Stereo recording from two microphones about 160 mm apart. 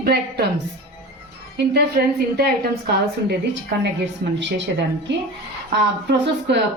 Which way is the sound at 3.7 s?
90° right.